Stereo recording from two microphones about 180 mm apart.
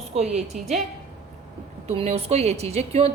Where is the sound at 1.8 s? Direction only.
35° right (ahead or behind).